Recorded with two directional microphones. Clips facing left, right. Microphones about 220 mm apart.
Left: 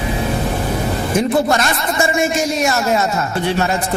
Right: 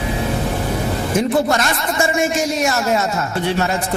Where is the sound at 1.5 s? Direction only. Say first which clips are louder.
Left 1 dB; 20° left (ahead or behind).